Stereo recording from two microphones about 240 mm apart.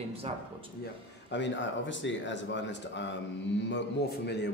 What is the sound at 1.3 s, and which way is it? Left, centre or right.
Speech, left.